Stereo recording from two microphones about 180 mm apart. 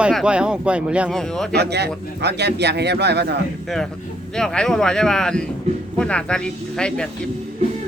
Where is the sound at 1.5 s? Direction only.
65° right (ahead or behind).